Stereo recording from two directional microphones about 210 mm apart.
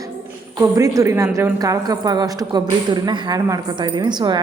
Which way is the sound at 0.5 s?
15° right (ahead or behind).